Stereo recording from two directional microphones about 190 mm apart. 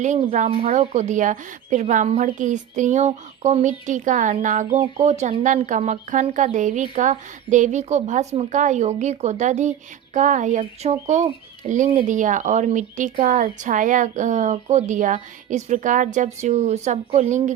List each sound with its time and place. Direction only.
0.0 s speech: 40° right (ahead or behind)